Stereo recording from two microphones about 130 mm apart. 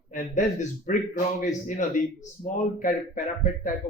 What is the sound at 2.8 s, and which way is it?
Speech, 90° left.